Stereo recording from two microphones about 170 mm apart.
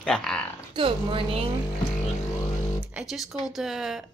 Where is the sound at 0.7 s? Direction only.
30° right (ahead or behind).